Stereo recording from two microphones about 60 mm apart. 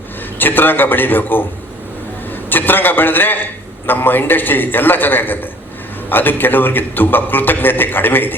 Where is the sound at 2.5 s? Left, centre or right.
Left.